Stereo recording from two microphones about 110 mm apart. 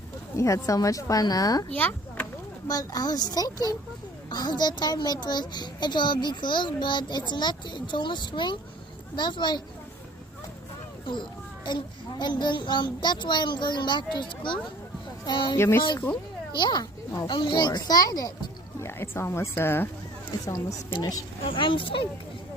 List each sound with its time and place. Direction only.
0.3 s a woman's voice: 30° left (ahead or behind)
1.7 s speech: 15° left (ahead or behind)
2.6 s a woman's voice: 35° left (ahead or behind)
11.0 s a sound: 45° left (ahead or behind)
12.2 s a child's voice: 45° left (ahead or behind)
15.5 s speech: 25° left (ahead or behind)
16.6 s a child's voice: 45° left (ahead or behind)
18.8 s a woman's voice: 20° left (ahead or behind); by 21.2 s 35° left (ahead or behind)
21.4 s a child's voice: 50° left (ahead or behind)